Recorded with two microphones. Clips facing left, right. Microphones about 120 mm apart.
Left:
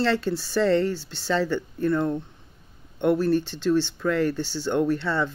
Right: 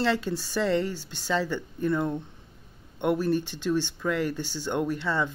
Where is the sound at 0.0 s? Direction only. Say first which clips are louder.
Left 3 dB; 15° right (ahead or behind).